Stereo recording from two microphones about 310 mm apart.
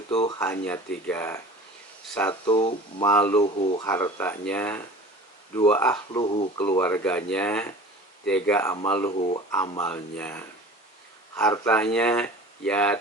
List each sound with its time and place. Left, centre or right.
0.1 s speech: centre
3.4 s speech: centre
3.8 s speech: centre
9.1 s speech: left
9.5 s speech: centre